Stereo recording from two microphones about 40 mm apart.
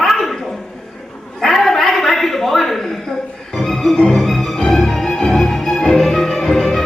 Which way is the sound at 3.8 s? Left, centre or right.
Centre.